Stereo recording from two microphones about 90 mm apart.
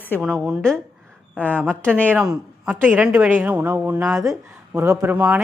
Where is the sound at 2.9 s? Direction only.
15° right (ahead or behind).